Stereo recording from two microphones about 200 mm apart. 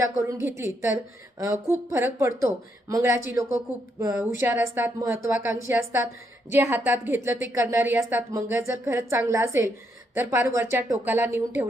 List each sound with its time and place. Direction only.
0.0 s speech: 15° right (ahead or behind)